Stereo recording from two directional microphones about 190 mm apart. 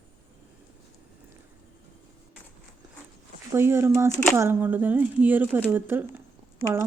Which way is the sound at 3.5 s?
10° right (ahead or behind).